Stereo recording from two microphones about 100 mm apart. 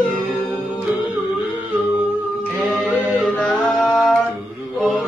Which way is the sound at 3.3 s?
10° left (ahead or behind).